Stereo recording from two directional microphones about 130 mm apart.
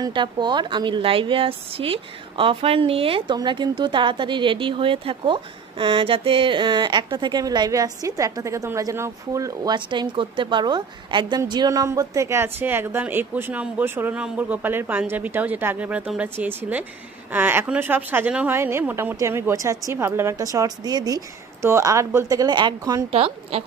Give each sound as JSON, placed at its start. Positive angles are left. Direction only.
{"t": 0.0, "sound": "a woman's voice", "side_deg": -35}
{"t": 3.3, "sound": "a woman's voice", "side_deg": -35}
{"t": 9.8, "sound": "a woman's voice", "side_deg": -40}
{"t": 23.1, "sound": "a woman's voice", "side_deg": -50}